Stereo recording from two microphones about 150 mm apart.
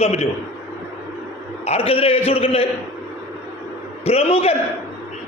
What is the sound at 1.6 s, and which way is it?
A man's voice, 40° left (ahead or behind).